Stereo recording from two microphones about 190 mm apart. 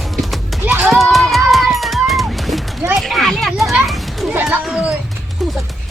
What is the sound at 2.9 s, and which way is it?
Children playing, centre (ahead or behind).